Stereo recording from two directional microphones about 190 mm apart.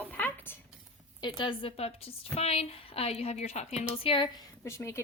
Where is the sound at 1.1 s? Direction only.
25° left (ahead or behind).